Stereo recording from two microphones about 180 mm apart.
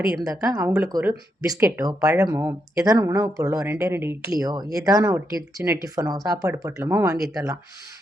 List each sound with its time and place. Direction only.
0.3 s speech: 20° right (ahead or behind)